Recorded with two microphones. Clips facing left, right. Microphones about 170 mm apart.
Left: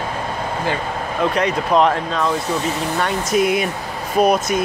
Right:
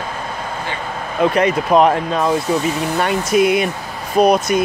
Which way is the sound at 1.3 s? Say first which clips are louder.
Right 3 dB; 5° right (ahead or behind).